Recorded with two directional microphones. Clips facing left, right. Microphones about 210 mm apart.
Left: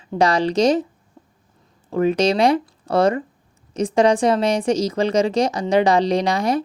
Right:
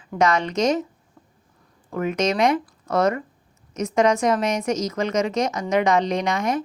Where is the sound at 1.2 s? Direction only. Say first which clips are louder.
Left 4 dB; 25° left (ahead or behind).